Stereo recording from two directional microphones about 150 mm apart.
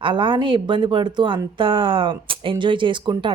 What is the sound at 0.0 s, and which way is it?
Speech, 35° right (ahead or behind).